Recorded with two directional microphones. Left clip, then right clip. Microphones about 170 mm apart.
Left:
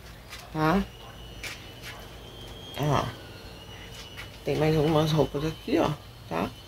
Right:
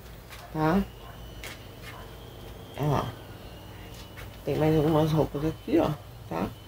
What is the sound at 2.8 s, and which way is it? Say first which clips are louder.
Speech: left 2 dB; 25° left (ahead or behind).